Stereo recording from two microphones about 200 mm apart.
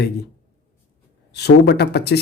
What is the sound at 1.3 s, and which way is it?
Speech, 55° left (ahead or behind).